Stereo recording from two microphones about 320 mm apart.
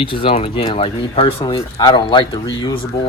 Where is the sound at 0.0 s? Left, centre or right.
Centre.